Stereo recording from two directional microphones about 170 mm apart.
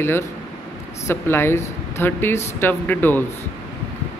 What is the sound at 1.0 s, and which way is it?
Speech, 15° left (ahead or behind).